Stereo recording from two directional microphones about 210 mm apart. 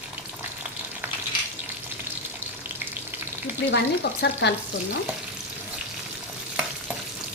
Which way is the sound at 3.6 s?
50° left (ahead or behind).